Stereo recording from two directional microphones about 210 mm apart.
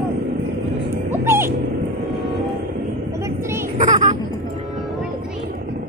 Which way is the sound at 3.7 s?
35° right (ahead or behind).